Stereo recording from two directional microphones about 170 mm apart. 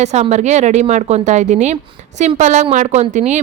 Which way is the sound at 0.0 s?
40° right (ahead or behind).